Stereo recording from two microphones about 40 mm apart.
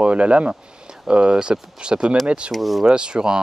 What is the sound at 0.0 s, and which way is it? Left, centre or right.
Speech, right.